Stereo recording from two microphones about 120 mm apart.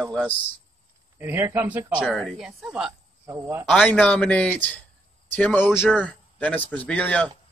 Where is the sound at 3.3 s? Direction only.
20° right (ahead or behind).